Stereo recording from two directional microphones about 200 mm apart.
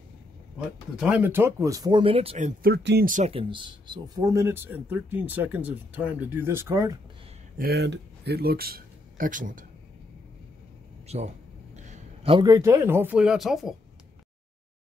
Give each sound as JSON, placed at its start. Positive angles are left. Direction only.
{"t": 0.6, "sound": "speech", "side_deg": -5}
{"t": 3.1, "sound": "speech", "side_deg": -35}
{"t": 7.5, "sound": "speech", "side_deg": -50}
{"t": 11.1, "sound": "a man's voice", "side_deg": -30}